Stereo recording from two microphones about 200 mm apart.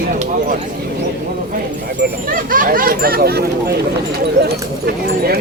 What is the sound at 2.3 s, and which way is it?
Speech, 45° right (ahead or behind).